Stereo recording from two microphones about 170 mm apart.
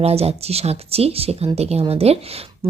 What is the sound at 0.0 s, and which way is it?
Speech, 35° right (ahead or behind).